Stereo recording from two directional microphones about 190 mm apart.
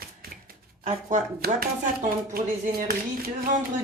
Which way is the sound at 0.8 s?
40° right (ahead or behind).